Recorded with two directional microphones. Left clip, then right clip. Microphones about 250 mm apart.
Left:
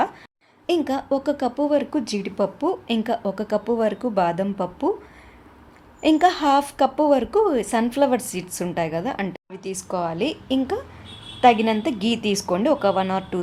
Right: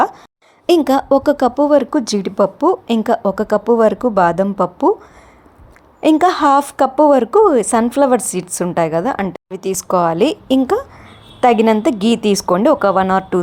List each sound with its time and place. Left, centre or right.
0.7 s a woman's voice: right
6.0 s a woman's voice: right